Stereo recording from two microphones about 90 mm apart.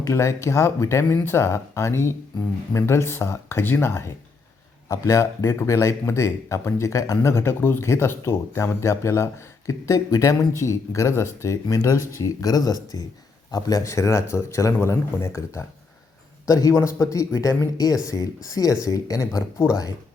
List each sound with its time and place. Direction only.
0.1 s speech: 35° left (ahead or behind)
19.6 s speech: 25° left (ahead or behind)